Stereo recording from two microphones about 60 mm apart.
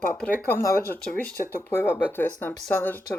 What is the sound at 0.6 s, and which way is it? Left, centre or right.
A woman's voice, left.